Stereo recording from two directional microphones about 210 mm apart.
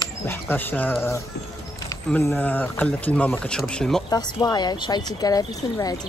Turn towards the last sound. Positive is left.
turn(degrees=15)  # may be behind; listen again after turning